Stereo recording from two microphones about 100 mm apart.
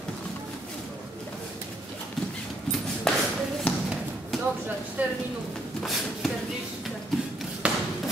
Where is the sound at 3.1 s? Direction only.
5° left (ahead or behind).